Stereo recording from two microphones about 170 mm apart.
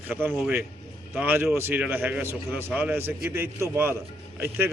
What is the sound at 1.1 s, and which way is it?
A man's voice, 10° right (ahead or behind).